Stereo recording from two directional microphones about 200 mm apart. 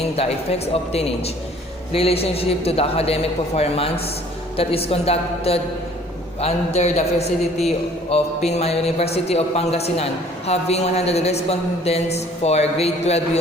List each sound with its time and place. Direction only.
0.2 s a man's voice: 30° left (ahead or behind)